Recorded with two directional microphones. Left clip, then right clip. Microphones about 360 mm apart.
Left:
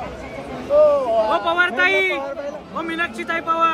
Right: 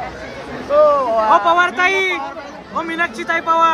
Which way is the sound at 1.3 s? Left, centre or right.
Centre.